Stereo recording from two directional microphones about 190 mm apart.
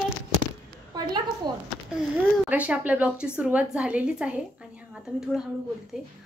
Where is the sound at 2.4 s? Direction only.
5° right (ahead or behind).